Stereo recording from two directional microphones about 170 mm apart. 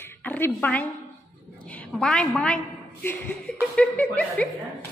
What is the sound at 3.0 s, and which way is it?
Speech, 10° left (ahead or behind).